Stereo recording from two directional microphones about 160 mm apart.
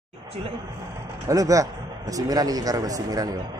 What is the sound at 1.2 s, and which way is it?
A man's voice, 20° right (ahead or behind).